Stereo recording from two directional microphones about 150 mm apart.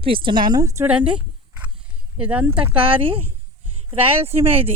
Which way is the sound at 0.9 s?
5° right (ahead or behind).